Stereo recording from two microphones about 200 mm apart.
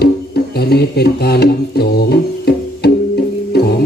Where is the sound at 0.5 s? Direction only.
50° left (ahead or behind).